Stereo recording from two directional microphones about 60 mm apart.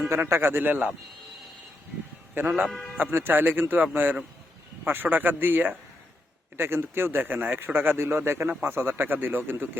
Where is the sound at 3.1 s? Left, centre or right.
Right.